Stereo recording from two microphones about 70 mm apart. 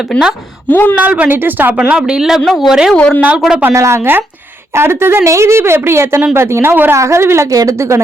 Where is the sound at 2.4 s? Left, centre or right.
Centre.